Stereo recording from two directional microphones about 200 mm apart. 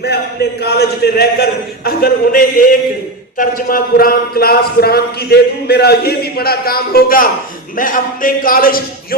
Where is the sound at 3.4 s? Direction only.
45° left (ahead or behind).